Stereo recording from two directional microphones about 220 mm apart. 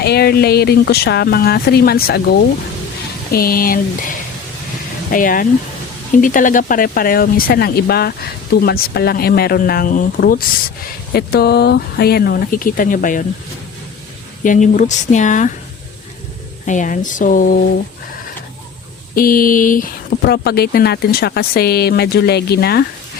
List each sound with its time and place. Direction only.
0.0 s speech: 45° left (ahead or behind)
5.1 s speech: 40° left (ahead or behind)
14.4 s speech: 35° left (ahead or behind)
16.6 s speech: 35° left (ahead or behind)
19.1 s speech: 40° left (ahead or behind)